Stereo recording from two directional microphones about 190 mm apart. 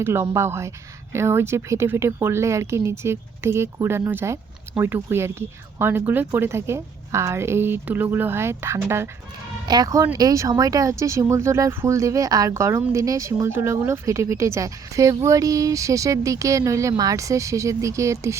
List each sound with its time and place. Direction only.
0.0 s speech: 15° right (ahead or behind)